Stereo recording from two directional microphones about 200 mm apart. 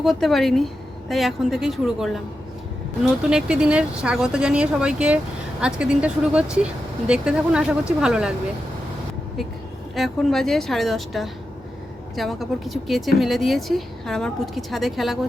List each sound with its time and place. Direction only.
0.0 s speech: centre (ahead or behind)
3.2 s speech: 5° right (ahead or behind)
9.9 s speech: centre (ahead or behind)